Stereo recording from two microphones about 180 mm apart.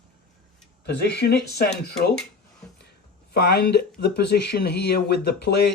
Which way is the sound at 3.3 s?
60° left (ahead or behind).